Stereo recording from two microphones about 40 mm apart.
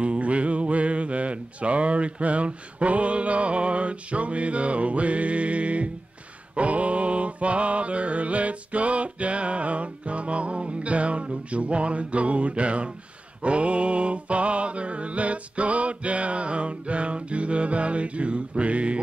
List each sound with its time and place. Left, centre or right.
0.0 s music: right
13.4 s mantra: right